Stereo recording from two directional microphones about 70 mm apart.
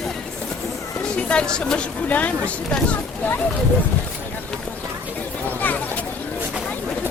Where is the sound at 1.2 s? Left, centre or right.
Centre.